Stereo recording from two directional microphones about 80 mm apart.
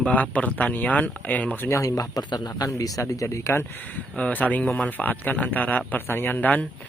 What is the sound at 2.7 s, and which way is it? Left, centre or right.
Speech, left.